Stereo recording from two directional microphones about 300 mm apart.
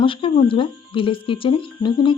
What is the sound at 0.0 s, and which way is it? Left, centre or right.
Speech, centre.